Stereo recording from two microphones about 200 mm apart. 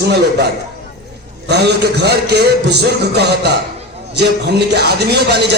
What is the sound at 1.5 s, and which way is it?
Speech, 55° right (ahead or behind).